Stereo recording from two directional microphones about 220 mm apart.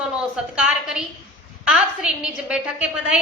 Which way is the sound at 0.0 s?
5° right (ahead or behind).